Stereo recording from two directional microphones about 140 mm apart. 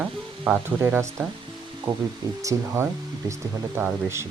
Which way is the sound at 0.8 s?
20° right (ahead or behind).